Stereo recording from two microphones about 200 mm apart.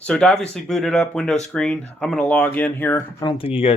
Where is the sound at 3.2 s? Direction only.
20° left (ahead or behind).